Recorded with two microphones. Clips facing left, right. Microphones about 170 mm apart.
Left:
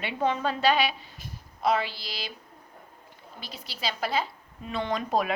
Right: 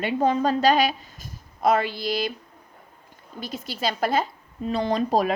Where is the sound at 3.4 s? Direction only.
50° right (ahead or behind).